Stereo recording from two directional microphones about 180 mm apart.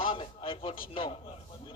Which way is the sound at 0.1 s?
30° left (ahead or behind).